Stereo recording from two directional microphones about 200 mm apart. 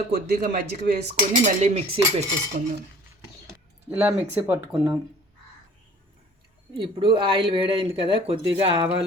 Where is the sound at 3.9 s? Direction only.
10° right (ahead or behind).